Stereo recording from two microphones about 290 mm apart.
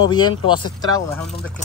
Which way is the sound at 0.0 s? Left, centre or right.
Centre.